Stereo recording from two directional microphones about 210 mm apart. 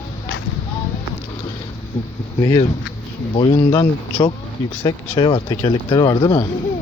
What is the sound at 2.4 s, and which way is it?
Speech, 20° left (ahead or behind).